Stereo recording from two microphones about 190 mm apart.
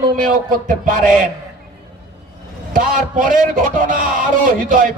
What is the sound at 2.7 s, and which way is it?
A man's voice, 45° right (ahead or behind).